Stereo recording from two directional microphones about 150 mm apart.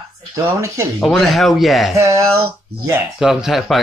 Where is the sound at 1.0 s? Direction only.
Centre (ahead or behind).